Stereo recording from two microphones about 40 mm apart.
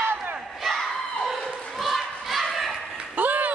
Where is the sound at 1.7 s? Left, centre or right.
Centre.